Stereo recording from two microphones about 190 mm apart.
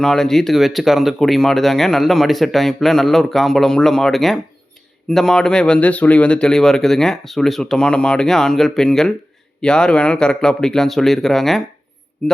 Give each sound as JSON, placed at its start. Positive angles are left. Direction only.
{"t": 0.0, "sound": "speech", "side_deg": 0}